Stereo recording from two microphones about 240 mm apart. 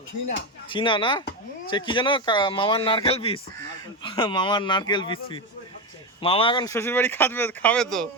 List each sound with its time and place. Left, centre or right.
0.3 s speech: left; by 8.0 s centre